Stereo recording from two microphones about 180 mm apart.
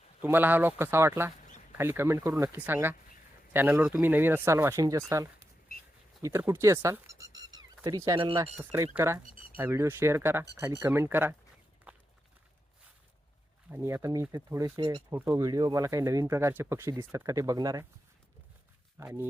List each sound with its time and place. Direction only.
0.2 s speech: 10° right (ahead or behind); by 8.4 s 25° right (ahead or behind)
8.7 s speech: 15° right (ahead or behind)
11.9 s walk: 5° right (ahead or behind)
13.7 s speech: 15° right (ahead or behind)
18.9 s speech: 10° right (ahead or behind)